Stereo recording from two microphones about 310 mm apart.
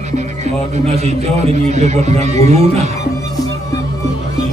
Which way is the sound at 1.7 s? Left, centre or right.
Right.